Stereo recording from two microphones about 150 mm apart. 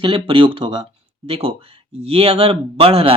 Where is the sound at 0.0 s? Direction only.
35° right (ahead or behind).